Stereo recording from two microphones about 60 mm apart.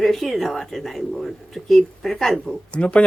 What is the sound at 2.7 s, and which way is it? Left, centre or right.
Speech, left.